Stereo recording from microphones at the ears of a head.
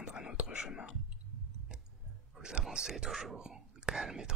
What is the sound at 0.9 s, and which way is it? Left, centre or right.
Clicking, right.